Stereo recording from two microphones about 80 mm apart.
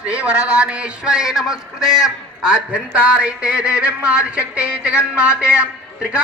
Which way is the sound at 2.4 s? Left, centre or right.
Centre.